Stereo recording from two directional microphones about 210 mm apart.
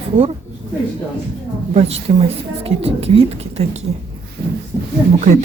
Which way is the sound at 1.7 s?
30° right (ahead or behind).